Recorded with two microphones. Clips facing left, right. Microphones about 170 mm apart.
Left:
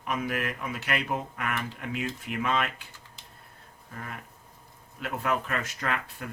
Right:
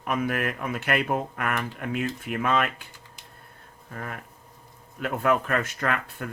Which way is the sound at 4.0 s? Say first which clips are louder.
Right 4 dB; 55° right (ahead or behind).